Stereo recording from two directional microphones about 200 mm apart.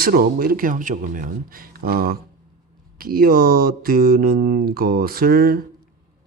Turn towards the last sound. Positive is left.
turn(degrees=-50)  # may be behind; listen again after turning